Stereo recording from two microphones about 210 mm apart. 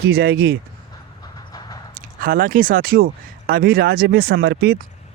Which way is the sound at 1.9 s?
40° right (ahead or behind).